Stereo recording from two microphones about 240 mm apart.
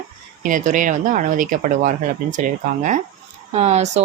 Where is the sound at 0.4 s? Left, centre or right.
Right.